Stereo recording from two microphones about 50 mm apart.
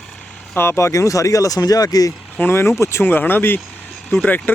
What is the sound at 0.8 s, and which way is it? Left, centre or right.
Speech, left.